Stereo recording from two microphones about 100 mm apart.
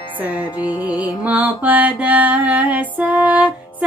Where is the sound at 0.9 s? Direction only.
45° left (ahead or behind).